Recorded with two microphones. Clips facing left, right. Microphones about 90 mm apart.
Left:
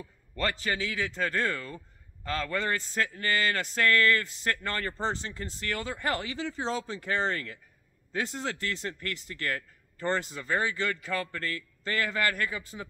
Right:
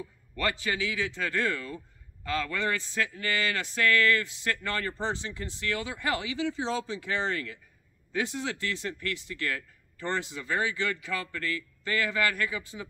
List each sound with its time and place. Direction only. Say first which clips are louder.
0.6 s speech: even; 40° left (ahead or behind)